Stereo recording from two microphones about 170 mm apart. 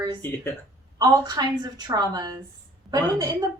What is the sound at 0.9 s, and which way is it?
A woman's voice, 20° right (ahead or behind).